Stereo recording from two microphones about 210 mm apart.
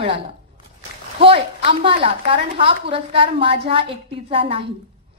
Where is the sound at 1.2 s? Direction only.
25° right (ahead or behind).